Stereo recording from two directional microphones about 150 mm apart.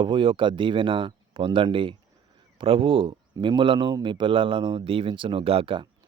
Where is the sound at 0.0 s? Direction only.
35° right (ahead or behind).